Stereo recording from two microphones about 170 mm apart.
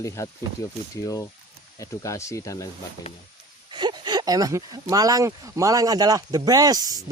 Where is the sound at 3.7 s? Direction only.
25° right (ahead or behind).